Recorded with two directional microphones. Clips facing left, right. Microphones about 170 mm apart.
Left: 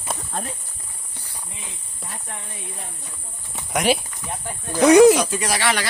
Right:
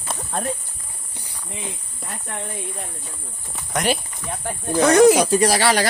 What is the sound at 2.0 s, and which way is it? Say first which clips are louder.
Speech: right 5 dB; 65° right (ahead or behind).